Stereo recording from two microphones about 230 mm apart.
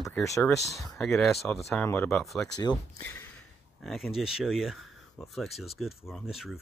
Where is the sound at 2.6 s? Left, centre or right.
Centre.